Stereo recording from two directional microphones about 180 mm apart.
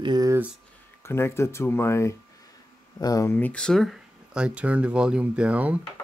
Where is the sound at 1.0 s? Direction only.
15° left (ahead or behind).